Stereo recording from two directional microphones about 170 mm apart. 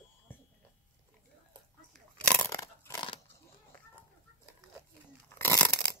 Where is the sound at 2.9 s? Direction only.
30° left (ahead or behind).